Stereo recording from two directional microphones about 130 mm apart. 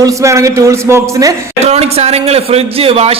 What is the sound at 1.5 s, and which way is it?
A man's voice, 55° right (ahead or behind).